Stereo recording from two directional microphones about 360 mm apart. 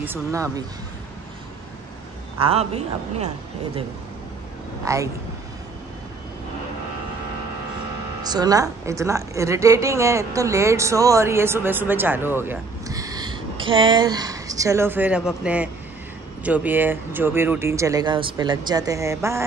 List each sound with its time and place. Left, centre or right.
0.0 s a woman's voice: centre
2.3 s a woman's voice: centre
4.8 s a woman's voice: centre
8.2 s a woman's voice: centre